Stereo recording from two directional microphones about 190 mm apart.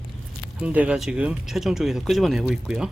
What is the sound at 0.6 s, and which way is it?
Speech, 5° right (ahead or behind).